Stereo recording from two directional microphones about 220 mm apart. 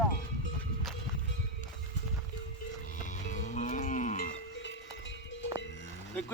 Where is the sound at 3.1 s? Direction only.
35° left (ahead or behind).